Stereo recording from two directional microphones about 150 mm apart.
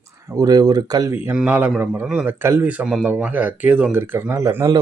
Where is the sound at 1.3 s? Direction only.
10° right (ahead or behind).